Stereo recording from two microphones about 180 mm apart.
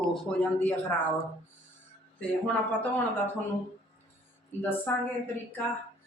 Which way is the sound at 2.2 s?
5° left (ahead or behind).